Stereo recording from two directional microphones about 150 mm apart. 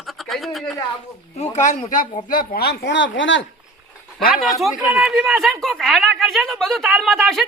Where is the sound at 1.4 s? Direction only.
55° left (ahead or behind).